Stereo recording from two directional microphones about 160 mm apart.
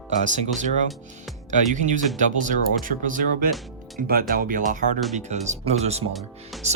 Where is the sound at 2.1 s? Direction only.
55° right (ahead or behind).